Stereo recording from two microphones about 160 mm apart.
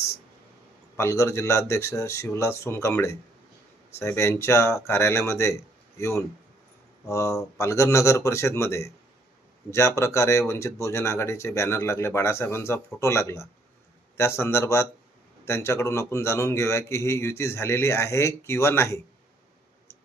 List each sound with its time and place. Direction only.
0.9 s a man's voice: 15° left (ahead or behind)